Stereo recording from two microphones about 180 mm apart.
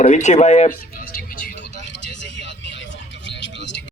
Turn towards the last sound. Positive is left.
turn(degrees=85)